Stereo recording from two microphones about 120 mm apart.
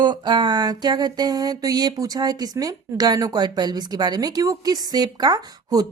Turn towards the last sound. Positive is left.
turn(degrees=-35)  # may be behind; listen again after turning